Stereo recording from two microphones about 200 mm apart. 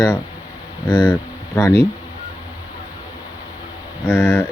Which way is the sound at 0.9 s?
25° left (ahead or behind).